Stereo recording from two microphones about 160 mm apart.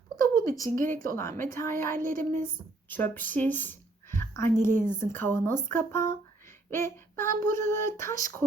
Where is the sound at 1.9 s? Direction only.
60° right (ahead or behind).